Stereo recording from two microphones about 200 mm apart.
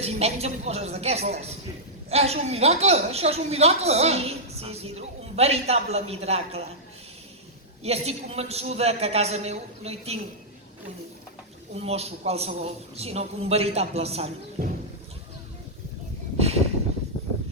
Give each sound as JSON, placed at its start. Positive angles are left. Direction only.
{"t": 0.0, "sound": "a woman's voice", "side_deg": -30}
{"t": 7.9, "sound": "a woman's voice", "side_deg": -30}
{"t": 11.8, "sound": "a woman's voice", "side_deg": -30}
{"t": 14.6, "sound": "speech", "side_deg": -50}